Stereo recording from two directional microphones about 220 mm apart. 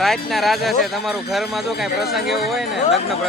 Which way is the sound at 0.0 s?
Centre (ahead or behind).